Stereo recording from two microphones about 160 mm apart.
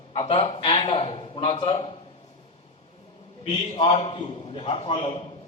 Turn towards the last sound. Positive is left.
turn(degrees=30)  # may be behind; listen again after turning